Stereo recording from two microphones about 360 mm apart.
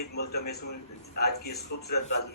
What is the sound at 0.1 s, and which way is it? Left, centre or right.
A man's voice, left.